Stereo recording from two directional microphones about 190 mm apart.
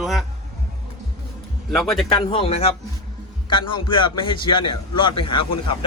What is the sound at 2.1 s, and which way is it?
A man's voice, 30° left (ahead or behind).